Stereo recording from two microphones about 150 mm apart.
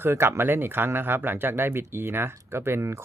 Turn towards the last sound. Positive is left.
turn(degrees=-20)  # may be behind; listen again after turning